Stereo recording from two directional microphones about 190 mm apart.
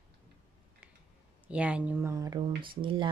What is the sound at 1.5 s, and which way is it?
Speech, 5° right (ahead or behind).